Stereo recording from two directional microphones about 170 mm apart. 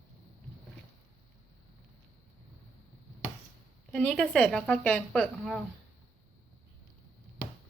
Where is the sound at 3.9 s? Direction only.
5° left (ahead or behind).